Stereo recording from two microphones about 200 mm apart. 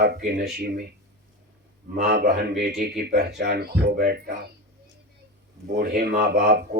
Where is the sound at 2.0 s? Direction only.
50° right (ahead or behind).